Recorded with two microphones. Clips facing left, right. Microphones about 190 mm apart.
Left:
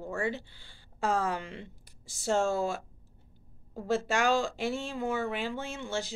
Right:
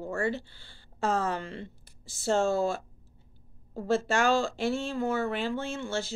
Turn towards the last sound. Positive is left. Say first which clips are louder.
# right 2 dB
turn(degrees=15)  # may be behind; listen again after turning